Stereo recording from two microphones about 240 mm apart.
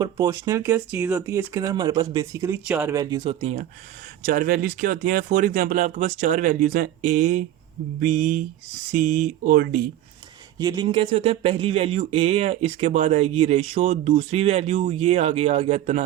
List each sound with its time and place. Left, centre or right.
0.0 s speech: centre
3.4 s speech: right
10.6 s speech: centre